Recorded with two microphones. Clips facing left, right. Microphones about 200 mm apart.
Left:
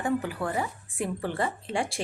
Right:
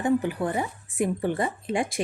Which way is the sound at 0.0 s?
20° right (ahead or behind).